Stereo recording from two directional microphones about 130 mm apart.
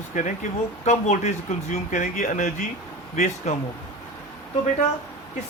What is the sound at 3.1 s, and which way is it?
Speech, 60° left (ahead or behind).